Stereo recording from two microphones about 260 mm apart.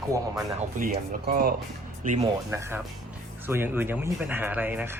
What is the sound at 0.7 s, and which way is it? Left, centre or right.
Speech, right.